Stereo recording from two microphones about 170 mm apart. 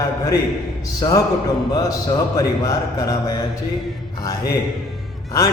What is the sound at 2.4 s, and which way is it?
A man's voice, 20° left (ahead or behind).